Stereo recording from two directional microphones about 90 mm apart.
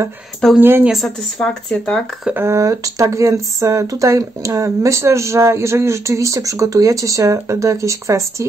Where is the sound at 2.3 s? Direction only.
35° right (ahead or behind).